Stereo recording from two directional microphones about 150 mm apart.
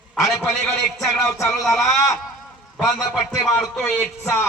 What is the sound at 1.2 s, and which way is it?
Speech, 20° left (ahead or behind).